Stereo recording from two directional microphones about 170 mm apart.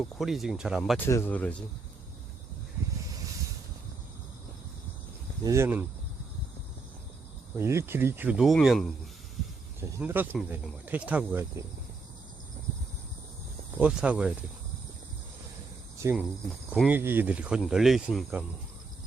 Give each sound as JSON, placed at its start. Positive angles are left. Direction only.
{"t": 0.0, "sound": "speech", "side_deg": 0}
{"t": 1.0, "sound": "speech", "side_deg": 10}
{"t": 5.4, "sound": "speech", "side_deg": -15}
{"t": 7.5, "sound": "speech", "side_deg": -15}
{"t": 10.0, "sound": "speech", "side_deg": -10}
{"t": 13.7, "sound": "speech", "side_deg": -5}
{"t": 16.0, "sound": "speech", "side_deg": -15}